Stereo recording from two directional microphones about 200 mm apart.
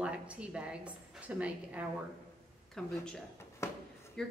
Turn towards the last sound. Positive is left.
turn(degrees=5)  # may be behind; listen again after turning